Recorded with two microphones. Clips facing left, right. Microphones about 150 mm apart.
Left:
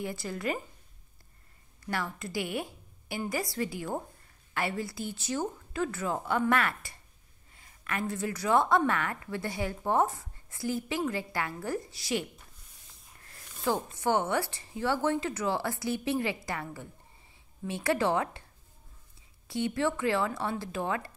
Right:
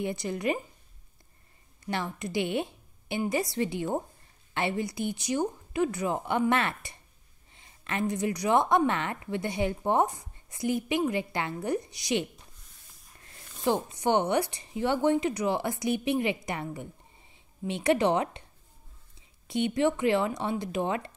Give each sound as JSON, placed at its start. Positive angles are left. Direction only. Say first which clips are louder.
{"t": 0.0, "sound": "a woman's voice", "louder": "right 4 dB", "side_deg": -20}
{"t": 1.9, "sound": "a woman's voice", "louder": "right 2 dB", "side_deg": -20}
{"t": 13.2, "sound": "a sound", "louder": "right 4 dB", "side_deg": -20}
{"t": 13.7, "sound": "a woman's voice", "louder": "right 2 dB", "side_deg": -20}
{"t": 19.4, "sound": "a woman's voice", "louder": "right 4 dB", "side_deg": -20}